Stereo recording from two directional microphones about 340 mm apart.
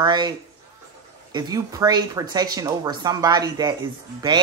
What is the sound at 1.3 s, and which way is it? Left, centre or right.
Speech, centre.